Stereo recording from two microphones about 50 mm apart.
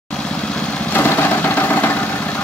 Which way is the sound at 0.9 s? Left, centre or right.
Left.